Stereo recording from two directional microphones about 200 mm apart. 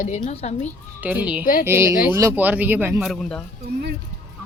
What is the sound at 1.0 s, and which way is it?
Speech, 5° right (ahead or behind).